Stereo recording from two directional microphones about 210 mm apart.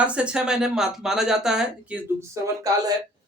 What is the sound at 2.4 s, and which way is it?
Speech, 15° right (ahead or behind).